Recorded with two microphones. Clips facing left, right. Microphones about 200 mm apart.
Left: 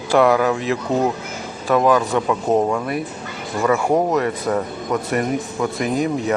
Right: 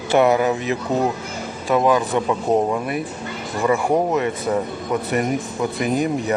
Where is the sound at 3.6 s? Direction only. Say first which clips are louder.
Left 1 dB; 15° right (ahead or behind).